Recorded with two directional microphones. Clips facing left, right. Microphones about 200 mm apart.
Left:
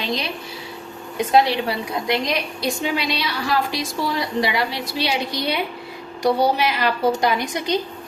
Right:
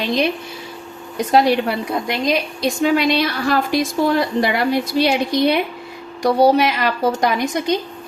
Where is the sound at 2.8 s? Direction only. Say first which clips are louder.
Right 11 dB; 50° right (ahead or behind).